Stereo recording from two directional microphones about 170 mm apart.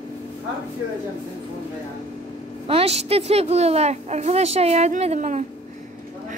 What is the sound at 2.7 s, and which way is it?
A woman's voice, 35° right (ahead or behind).